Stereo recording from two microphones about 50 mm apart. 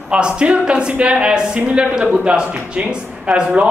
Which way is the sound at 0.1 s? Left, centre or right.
Right.